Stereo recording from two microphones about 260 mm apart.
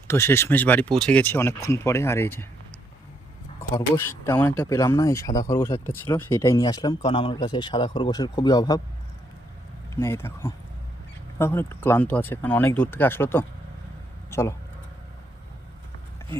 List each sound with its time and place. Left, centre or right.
0.1 s speech: centre
3.6 s speech: centre
10.0 s a man's voice: centre